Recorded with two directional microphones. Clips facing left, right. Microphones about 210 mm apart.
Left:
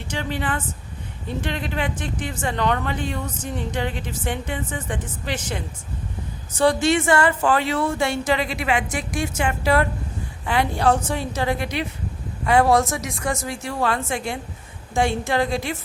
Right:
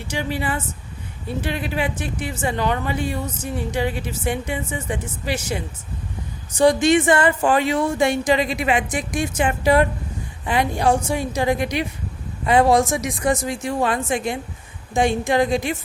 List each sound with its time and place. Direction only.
0.1 s a woman's voice: 10° right (ahead or behind)